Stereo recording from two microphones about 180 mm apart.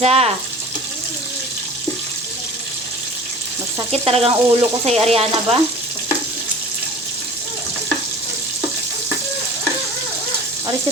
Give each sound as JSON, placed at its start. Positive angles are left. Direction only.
{"t": 0.0, "sound": "speech", "side_deg": -35}
{"t": 3.9, "sound": "speech", "side_deg": -35}